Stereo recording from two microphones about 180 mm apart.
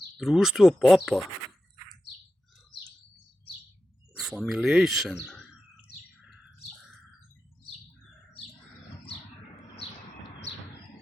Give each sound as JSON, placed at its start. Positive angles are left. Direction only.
{"t": 0.2, "sound": "speech", "side_deg": 0}
{"t": 4.2, "sound": "speech", "side_deg": -5}
{"t": 5.2, "sound": "bird", "side_deg": 5}